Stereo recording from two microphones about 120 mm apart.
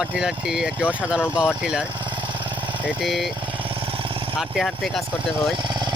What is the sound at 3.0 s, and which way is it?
Speech, centre (ahead or behind).